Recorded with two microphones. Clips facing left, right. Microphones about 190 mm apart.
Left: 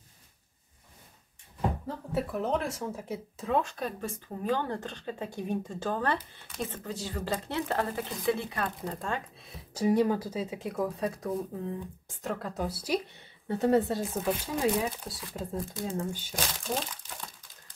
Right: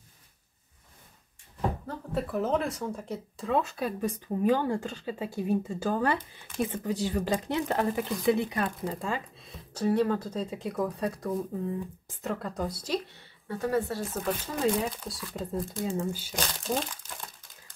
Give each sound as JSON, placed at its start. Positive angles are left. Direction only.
{"t": 2.1, "sound": "a woman's voice", "side_deg": 0}
{"t": 8.8, "sound": "speech", "side_deg": -5}
{"t": 9.8, "sound": "speech", "side_deg": 15}
{"t": 13.5, "sound": "speech", "side_deg": 25}
{"t": 14.4, "sound": "speech", "side_deg": 5}